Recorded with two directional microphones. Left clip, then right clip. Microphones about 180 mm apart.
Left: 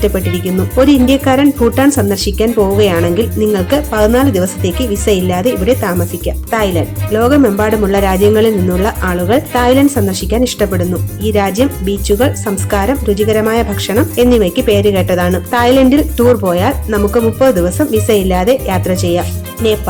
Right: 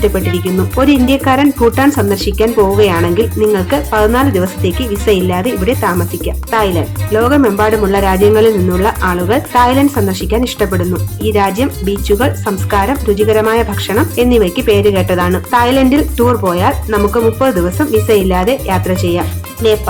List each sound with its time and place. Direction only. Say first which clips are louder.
0.3 s speech: left 1 dB; 35° left (ahead or behind)